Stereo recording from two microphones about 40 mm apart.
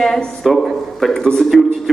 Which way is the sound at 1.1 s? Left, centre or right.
Centre.